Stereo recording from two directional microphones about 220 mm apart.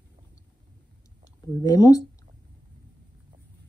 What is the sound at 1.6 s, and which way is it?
Speech, 15° left (ahead or behind).